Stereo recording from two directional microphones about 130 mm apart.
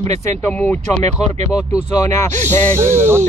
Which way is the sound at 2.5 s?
15° left (ahead or behind).